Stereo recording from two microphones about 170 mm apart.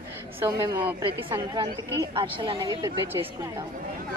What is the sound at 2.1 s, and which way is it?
Speech, 30° right (ahead or behind).